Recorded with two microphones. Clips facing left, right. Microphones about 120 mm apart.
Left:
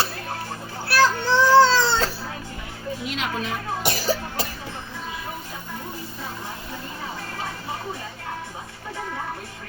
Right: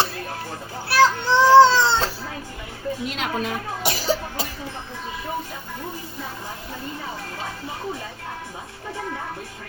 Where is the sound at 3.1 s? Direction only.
50° right (ahead or behind).